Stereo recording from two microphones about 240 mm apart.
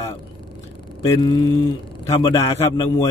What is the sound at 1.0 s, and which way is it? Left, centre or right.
Speech, centre.